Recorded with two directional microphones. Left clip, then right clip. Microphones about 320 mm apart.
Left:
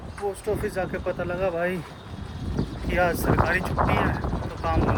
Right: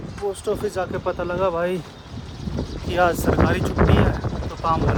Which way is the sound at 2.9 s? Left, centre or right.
Centre.